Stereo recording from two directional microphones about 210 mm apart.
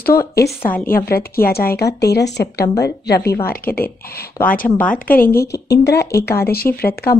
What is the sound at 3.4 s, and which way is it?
Speech, 45° left (ahead or behind).